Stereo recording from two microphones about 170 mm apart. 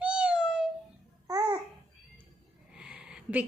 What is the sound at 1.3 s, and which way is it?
Babbling, 20° right (ahead or behind).